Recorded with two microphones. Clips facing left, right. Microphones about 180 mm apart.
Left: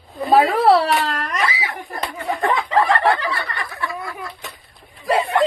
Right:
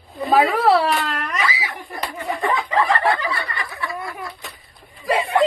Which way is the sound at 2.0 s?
Centre (ahead or behind).